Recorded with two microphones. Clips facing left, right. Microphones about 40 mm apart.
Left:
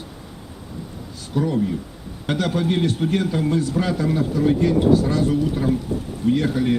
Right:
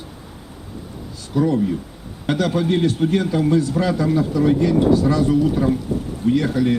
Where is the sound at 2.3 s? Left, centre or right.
Left.